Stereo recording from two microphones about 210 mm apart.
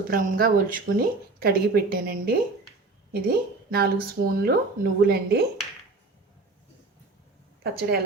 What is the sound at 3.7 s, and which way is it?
Speech, 45° right (ahead or behind).